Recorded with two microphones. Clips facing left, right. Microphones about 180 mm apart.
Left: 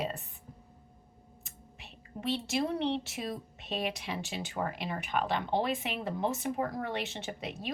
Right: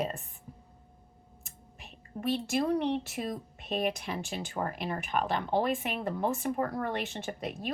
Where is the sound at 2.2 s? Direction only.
50° right (ahead or behind).